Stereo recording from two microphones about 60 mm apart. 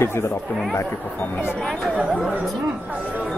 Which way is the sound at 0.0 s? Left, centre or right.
Left.